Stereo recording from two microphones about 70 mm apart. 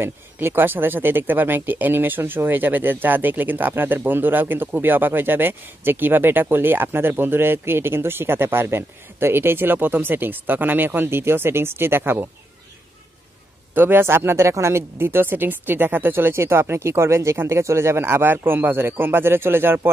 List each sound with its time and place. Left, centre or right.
0.0 s speech: right
13.7 s speech: right